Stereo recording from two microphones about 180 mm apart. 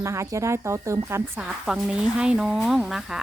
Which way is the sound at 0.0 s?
15° right (ahead or behind).